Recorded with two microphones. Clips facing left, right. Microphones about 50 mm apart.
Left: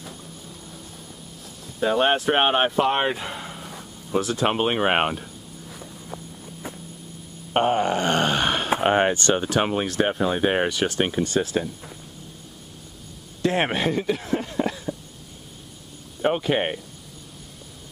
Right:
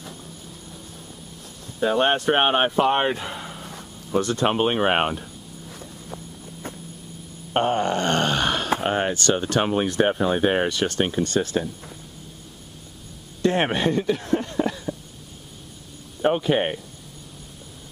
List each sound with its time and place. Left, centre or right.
1.8 s a sound: centre
7.5 s wail: centre
8.8 s speech: left
9.4 s speech: centre
9.8 s speech: centre
13.4 s speech: centre
16.2 s speech: centre